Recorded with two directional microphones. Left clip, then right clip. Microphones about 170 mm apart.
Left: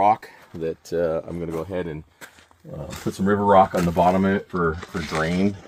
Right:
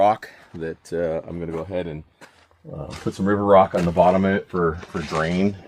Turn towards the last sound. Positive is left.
turn(degrees=40)  # may be behind; listen again after turning